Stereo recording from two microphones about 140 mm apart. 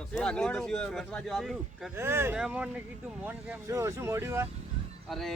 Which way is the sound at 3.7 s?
20° right (ahead or behind).